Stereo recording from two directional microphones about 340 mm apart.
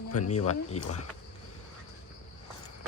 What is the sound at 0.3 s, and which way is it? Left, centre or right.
Speech, left.